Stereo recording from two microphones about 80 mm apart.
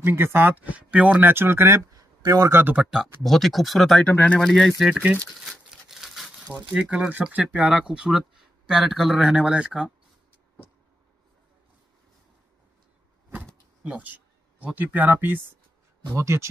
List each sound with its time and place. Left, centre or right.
0.0 s speech: right
2.5 s speech: right
2.9 s speech: centre
4.0 s speech: centre
4.4 s speech: centre
4.8 s speech: centre
5.4 s crumpling: centre
6.7 s speech: centre
13.8 s speech: centre
16.1 s speech: right